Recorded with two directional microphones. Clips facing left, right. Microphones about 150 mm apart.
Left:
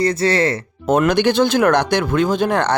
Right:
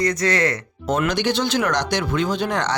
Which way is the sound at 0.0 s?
30° left (ahead or behind).